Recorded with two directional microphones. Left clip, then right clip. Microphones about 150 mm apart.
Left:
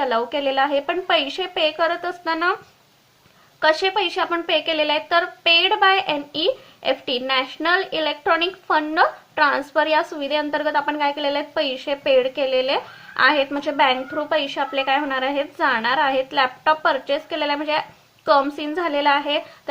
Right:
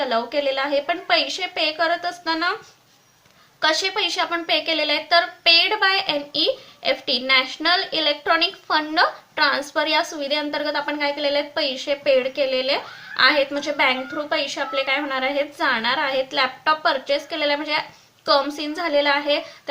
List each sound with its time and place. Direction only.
0.0 s a woman's voice: 35° left (ahead or behind)
3.6 s a woman's voice: 40° left (ahead or behind)